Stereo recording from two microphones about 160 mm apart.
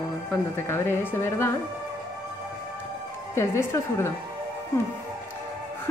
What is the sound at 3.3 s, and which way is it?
Speech, 20° left (ahead or behind).